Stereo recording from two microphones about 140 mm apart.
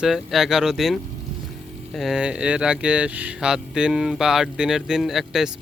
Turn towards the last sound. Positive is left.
turn(degrees=0)  # may be behind; listen again after turning